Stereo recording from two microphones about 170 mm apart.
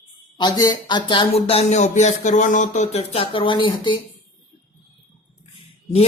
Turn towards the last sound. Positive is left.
turn(degrees=35)  # may be behind; listen again after turning